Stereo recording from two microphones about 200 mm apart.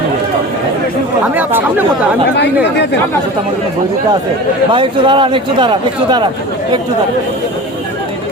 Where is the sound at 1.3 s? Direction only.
10° right (ahead or behind).